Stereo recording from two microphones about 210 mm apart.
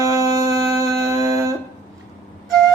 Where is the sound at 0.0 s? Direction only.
15° right (ahead or behind).